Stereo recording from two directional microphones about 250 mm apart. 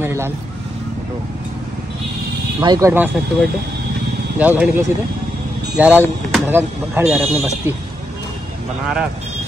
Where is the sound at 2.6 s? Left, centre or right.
Centre.